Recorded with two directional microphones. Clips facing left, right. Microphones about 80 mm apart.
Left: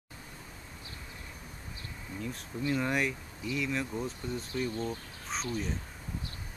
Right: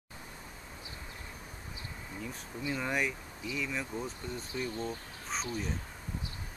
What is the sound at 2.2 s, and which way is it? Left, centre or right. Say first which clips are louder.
Speech: left 4 dB; centre.